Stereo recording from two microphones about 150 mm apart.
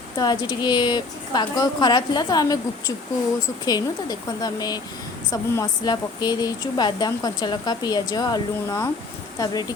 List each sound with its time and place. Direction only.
0.2 s speech: 30° left (ahead or behind)